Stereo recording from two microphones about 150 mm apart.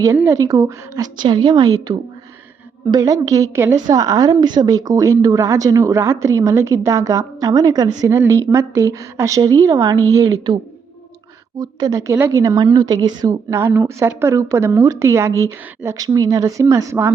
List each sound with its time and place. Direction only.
0.2 s a woman's voice: 20° right (ahead or behind)
11.6 s a woman's voice: 20° right (ahead or behind)